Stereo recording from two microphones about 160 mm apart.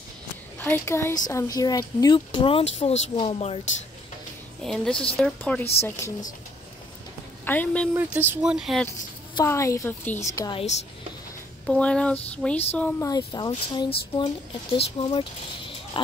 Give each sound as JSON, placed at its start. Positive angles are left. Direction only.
{"t": 0.7, "sound": "speech", "side_deg": 15}
{"t": 4.6, "sound": "speech", "side_deg": 5}
{"t": 7.4, "sound": "speech", "side_deg": 10}
{"t": 7.9, "sound": "speech", "side_deg": -10}
{"t": 9.4, "sound": "a woman's voice", "side_deg": 20}
{"t": 11.6, "sound": "speech", "side_deg": 5}
{"t": 13.0, "sound": "a woman's voice", "side_deg": 25}